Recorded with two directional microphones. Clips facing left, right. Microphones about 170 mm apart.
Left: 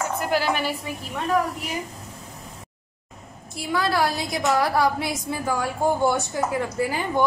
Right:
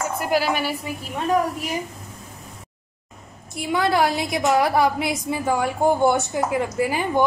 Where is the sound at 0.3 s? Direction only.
10° right (ahead or behind).